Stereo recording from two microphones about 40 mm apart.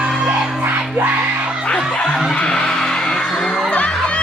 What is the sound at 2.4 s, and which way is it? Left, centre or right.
Music, centre.